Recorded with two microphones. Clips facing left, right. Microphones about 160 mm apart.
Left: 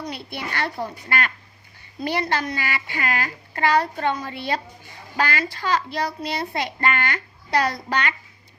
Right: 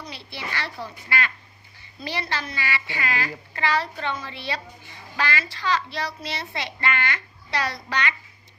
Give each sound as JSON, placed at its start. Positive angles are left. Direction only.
{"t": 0.0, "sound": "a child's voice", "side_deg": 50}